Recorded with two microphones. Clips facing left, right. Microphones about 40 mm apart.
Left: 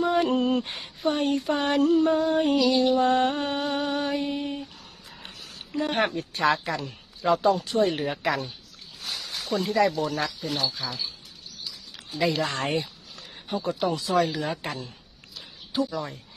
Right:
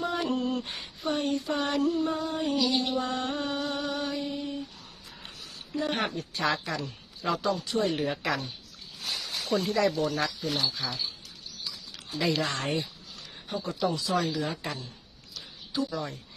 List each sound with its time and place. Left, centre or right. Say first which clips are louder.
0.2 s a sound: left 6 dB; left
2.2 s music: left 6 dB; left
5.2 s a sound: left 2 dB; left
6.7 s speech: left 3 dB; left
7.4 s speech: left 4 dB; left
7.9 s speech: left 2 dB; centre
9.2 s a sound: left 1 dB; centre
9.7 s speech: left 5 dB; centre
12.2 s speech: left 3 dB; centre
12.5 s speech: left 3 dB; left
15.4 s a sound: left 4 dB; left
15.9 s speech: left 2 dB; centre